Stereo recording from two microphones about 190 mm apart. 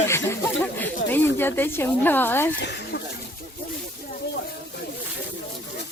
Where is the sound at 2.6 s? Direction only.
65° left (ahead or behind).